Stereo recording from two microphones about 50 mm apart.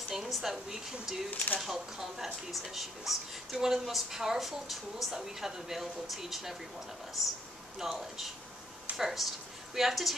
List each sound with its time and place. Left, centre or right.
0.1 s speech: centre
1.3 s speech: left
1.6 s a woman's voice: centre